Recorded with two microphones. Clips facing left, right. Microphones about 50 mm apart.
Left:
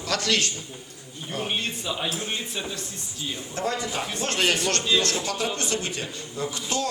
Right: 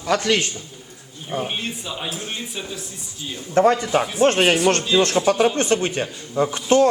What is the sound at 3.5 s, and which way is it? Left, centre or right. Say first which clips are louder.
A man's voice: right 12 dB; right.